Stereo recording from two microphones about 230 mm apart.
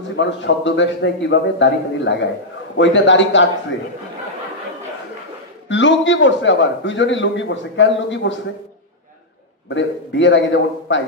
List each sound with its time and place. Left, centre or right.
0.1 s a man's voice: left
5.7 s a man's voice: left
9.7 s a man's voice: left